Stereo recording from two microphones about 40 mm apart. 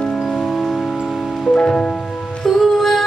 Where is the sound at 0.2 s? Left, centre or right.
Centre.